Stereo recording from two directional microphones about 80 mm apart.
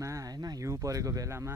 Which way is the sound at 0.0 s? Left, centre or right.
Right.